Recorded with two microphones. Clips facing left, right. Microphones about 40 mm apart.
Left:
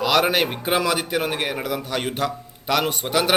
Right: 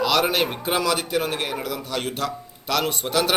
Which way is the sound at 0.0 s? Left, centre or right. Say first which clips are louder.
Left 2 dB; centre.